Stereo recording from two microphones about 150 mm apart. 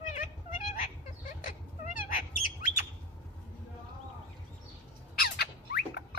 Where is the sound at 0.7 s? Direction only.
60° left (ahead or behind).